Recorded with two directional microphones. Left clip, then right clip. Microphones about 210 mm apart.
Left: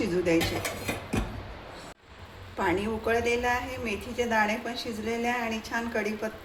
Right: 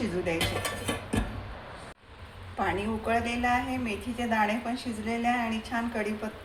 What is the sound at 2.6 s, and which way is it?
A woman's voice, 30° left (ahead or behind).